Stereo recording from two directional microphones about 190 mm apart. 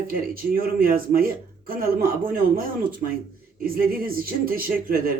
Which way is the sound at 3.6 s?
50° right (ahead or behind).